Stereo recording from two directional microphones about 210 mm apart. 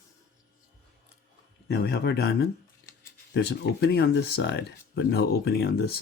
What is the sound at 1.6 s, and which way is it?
Speech, 50° left (ahead or behind).